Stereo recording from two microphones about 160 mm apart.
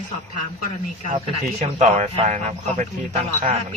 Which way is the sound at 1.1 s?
40° right (ahead or behind).